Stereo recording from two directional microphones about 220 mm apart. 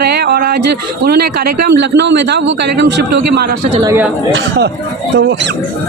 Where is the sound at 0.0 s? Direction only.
50° right (ahead or behind).